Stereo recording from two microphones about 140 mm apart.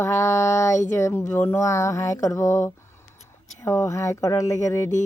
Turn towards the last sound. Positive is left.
turn(degrees=20)  # may be behind; listen again after turning